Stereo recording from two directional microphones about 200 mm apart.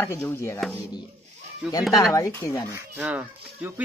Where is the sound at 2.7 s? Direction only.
5° right (ahead or behind).